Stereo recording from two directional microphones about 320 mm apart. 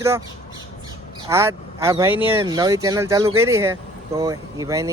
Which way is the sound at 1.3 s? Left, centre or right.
Centre.